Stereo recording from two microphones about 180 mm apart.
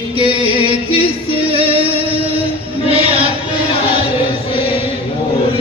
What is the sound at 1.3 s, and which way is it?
Music, 30° right (ahead or behind).